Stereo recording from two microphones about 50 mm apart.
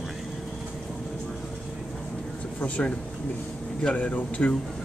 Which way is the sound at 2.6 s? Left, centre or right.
Left.